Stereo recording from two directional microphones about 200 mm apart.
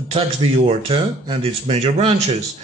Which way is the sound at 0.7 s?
30° right (ahead or behind).